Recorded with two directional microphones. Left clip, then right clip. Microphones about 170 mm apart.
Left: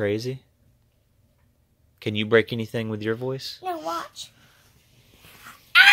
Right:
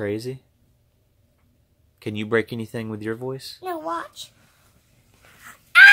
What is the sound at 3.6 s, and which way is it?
Speech, 10° right (ahead or behind).